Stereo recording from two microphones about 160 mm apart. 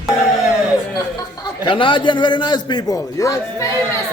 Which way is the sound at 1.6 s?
30° left (ahead or behind).